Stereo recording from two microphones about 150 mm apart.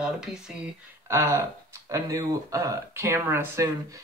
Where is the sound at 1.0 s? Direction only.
15° right (ahead or behind).